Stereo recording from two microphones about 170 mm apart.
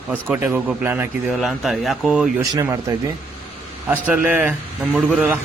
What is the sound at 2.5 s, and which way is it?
Speech, 20° right (ahead or behind).